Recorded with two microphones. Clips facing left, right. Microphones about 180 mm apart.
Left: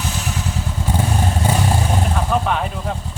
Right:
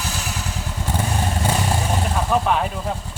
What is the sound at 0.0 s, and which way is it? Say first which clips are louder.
Motorcycle: left 3 dB; 10° right (ahead or behind).